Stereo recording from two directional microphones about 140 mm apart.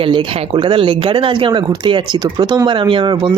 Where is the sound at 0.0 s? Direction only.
35° right (ahead or behind).